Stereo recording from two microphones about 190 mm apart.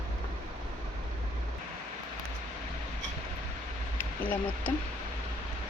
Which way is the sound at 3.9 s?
10° left (ahead or behind).